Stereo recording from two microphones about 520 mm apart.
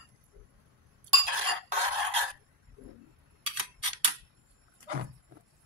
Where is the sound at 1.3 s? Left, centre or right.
Right.